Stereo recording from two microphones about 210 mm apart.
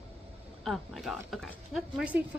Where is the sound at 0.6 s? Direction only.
Centre (ahead or behind).